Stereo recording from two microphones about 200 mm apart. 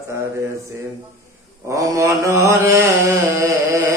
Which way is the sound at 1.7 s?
15° right (ahead or behind).